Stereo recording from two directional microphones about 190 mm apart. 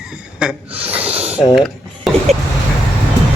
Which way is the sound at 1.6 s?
Centre (ahead or behind).